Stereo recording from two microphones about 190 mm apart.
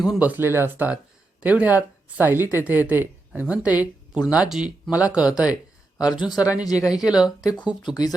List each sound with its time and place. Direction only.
0.0 s speech: 5° right (ahead or behind)
6.0 s speech: 20° left (ahead or behind)
7.0 s speech: 5° right (ahead or behind)
7.8 s speech: 20° left (ahead or behind)